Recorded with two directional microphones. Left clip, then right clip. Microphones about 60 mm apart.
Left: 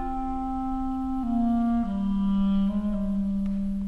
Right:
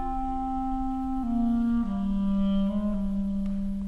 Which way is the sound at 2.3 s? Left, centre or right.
Right.